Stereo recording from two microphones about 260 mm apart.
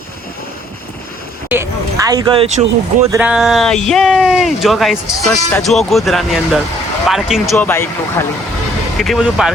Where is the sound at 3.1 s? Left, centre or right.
Centre.